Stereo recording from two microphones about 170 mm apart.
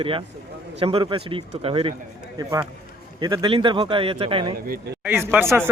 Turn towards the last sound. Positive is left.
turn(degrees=-15)  # may be behind; listen again after turning